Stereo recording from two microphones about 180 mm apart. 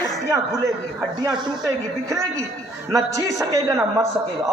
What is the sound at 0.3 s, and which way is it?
A man's voice, 15° right (ahead or behind).